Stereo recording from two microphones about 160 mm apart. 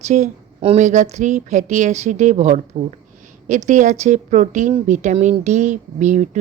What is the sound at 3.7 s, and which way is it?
Speech, 45° right (ahead or behind).